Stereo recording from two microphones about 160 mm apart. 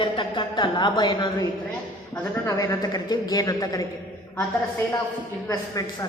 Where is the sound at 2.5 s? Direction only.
20° left (ahead or behind).